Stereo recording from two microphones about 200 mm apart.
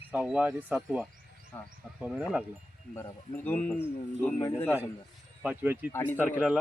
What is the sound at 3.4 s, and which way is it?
Speech, 10° left (ahead or behind).